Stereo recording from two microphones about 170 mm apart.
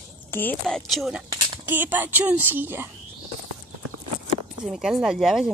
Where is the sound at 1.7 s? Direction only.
10° right (ahead or behind).